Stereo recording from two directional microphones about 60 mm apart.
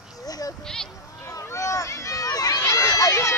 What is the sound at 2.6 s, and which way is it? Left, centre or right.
Run, left.